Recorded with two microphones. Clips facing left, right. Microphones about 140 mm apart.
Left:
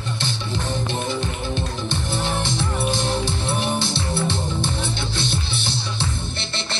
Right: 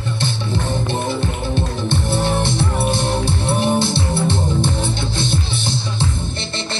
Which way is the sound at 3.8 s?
50° right (ahead or behind).